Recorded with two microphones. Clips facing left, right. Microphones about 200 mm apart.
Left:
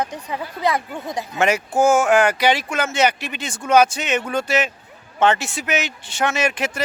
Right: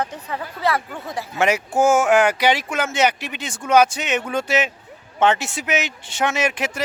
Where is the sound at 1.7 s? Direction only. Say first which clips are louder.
Left 1 dB; 5° right (ahead or behind).